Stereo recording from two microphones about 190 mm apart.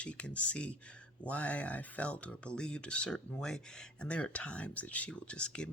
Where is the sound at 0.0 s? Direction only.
5° left (ahead or behind).